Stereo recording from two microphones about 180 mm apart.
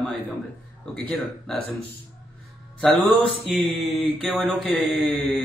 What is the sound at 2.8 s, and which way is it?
Speech, 5° left (ahead or behind).